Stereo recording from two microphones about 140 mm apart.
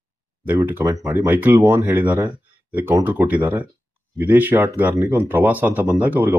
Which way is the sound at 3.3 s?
10° right (ahead or behind).